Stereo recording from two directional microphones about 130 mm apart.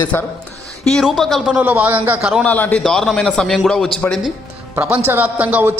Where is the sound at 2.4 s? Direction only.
15° left (ahead or behind).